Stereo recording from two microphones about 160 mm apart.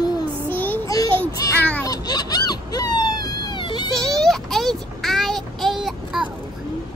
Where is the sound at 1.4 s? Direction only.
20° left (ahead or behind).